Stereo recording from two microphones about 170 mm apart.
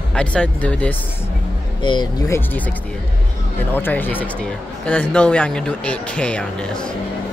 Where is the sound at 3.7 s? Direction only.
10° left (ahead or behind).